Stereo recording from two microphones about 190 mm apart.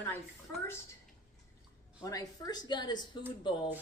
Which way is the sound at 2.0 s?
20° left (ahead or behind).